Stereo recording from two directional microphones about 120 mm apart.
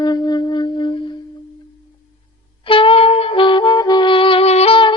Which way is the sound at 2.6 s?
45° left (ahead or behind).